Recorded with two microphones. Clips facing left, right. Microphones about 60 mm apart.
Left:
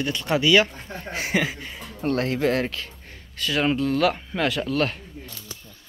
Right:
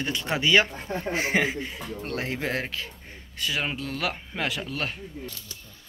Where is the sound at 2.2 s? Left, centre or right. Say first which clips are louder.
Left 6 dB; centre.